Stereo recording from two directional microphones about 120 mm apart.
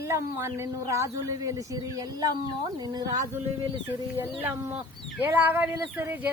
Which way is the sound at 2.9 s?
35° right (ahead or behind).